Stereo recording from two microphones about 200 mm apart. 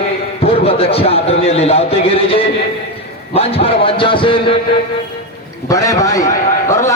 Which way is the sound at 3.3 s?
30° left (ahead or behind).